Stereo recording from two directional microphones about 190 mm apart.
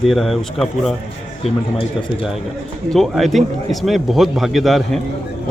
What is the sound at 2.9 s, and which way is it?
Speech, centre (ahead or behind).